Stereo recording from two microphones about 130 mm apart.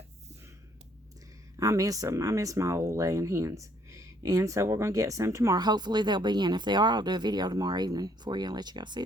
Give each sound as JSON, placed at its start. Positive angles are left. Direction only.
{"t": 1.5, "sound": "speech", "side_deg": -25}